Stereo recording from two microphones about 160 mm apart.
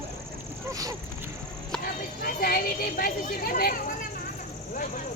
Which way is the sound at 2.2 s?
70° left (ahead or behind).